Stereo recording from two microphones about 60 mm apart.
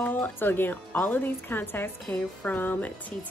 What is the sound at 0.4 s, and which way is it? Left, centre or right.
Speech, left.